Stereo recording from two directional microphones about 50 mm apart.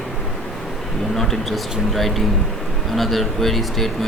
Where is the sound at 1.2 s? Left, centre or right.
Centre.